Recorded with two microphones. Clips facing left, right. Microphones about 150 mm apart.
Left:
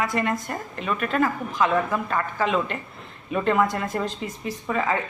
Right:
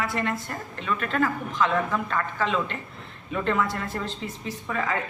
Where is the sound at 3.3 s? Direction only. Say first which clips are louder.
Left 4 dB; 15° left (ahead or behind).